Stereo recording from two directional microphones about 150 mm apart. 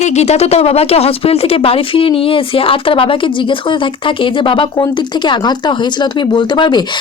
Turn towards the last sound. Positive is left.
turn(degrees=30)  # may be behind; listen again after turning